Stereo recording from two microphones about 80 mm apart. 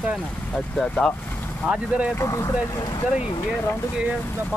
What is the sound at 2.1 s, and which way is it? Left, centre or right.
Speech, left.